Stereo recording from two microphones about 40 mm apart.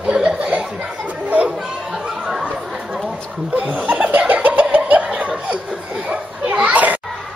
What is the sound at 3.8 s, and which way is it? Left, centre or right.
Laughter, right.